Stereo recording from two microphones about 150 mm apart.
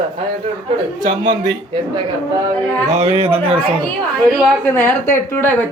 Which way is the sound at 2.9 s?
45° right (ahead or behind).